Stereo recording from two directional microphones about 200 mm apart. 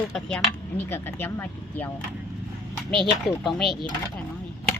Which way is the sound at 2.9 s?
Centre (ahead or behind).